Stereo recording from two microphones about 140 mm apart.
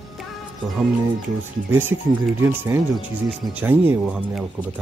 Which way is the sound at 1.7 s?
15° right (ahead or behind).